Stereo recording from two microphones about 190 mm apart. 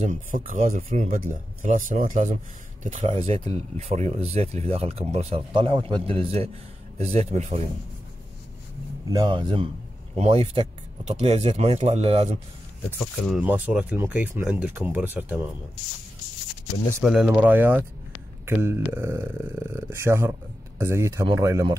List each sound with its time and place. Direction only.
0.0 s speech: 45° right (ahead or behind)
9.1 s speech: 25° right (ahead or behind)
13.0 s speech: centre (ahead or behind)
17.0 s speech: 5° right (ahead or behind)